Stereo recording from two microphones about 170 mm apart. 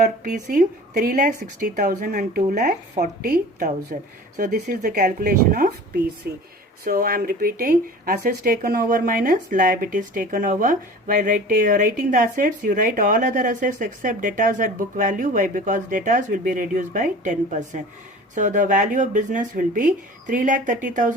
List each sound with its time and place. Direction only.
0.0 s speech: 45° right (ahead or behind)